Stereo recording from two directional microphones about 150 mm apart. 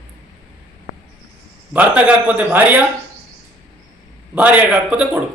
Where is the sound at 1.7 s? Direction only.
10° right (ahead or behind).